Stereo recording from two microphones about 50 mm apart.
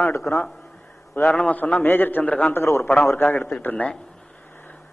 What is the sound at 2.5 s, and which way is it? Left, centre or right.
Speech, left.